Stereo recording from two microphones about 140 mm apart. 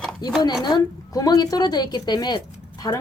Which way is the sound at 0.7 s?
25° left (ahead or behind).